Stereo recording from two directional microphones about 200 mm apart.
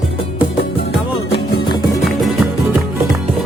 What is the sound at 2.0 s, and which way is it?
Music, centre (ahead or behind).